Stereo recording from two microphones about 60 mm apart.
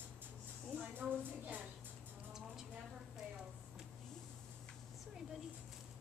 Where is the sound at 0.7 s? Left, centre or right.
Right.